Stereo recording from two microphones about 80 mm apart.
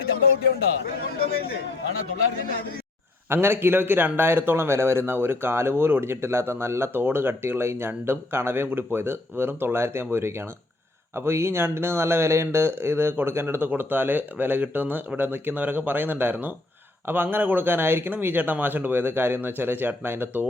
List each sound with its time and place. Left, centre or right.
3.2 s a man's voice: right